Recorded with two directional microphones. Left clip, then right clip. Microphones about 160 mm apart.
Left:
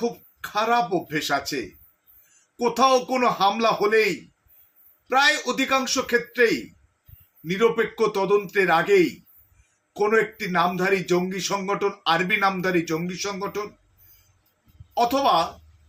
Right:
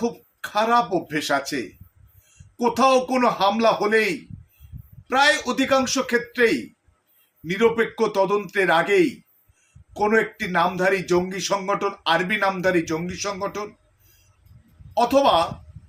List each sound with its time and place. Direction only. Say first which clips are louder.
0.0 s speech: right 1 dB; 20° right (ahead or behind)
2.6 s speech: right 1 dB; 20° right (ahead or behind)
5.0 s a man's voice: right 1 dB; 20° right (ahead or behind)
14.9 s speech: right 2 dB; 15° right (ahead or behind)